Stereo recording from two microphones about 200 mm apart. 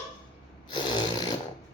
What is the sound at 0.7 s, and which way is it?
Snoring, 20° left (ahead or behind).